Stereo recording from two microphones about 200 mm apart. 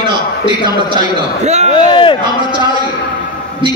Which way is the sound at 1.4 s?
35° right (ahead or behind).